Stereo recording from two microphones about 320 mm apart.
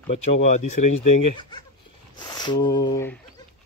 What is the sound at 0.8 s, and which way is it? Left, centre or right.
Speech, left.